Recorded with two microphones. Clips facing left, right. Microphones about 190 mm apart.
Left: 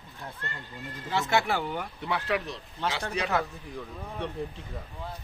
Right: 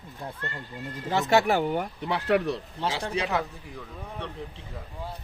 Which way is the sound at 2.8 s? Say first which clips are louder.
Even; 30° right (ahead or behind).